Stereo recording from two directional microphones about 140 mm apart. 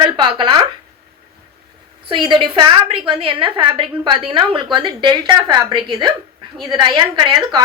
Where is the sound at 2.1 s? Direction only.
40° right (ahead or behind).